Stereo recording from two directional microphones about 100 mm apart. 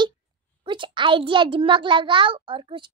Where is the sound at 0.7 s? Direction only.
55° right (ahead or behind).